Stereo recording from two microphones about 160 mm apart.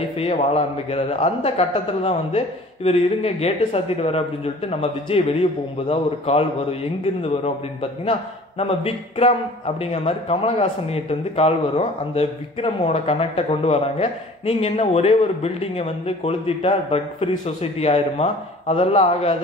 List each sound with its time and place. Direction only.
0.2 s a man's voice: 40° left (ahead or behind)